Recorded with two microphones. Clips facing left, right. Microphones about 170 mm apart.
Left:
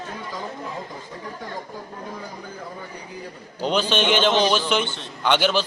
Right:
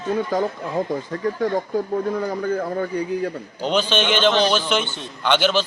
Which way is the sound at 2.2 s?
60° right (ahead or behind).